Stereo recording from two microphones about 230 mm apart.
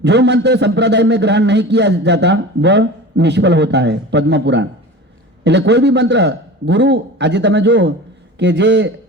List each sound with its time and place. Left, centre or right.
0.0 s a man's voice: right